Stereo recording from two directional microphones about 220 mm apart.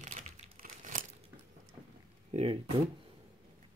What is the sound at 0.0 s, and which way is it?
Crumpling, 35° right (ahead or behind).